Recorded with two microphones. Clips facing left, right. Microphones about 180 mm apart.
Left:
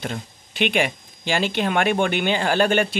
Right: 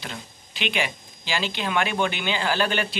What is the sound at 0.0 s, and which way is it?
Speech, 50° left (ahead or behind).